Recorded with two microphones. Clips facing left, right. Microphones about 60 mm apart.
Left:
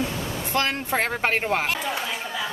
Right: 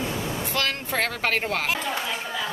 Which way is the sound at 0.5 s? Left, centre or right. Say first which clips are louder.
Left 6 dB; left.